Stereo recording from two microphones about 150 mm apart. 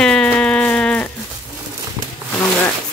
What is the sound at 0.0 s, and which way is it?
Sheep, 5° left (ahead or behind).